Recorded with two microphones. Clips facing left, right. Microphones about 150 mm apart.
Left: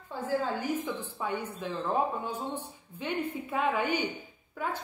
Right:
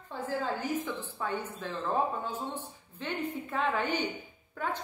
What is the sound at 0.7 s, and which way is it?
Speech, 10° left (ahead or behind).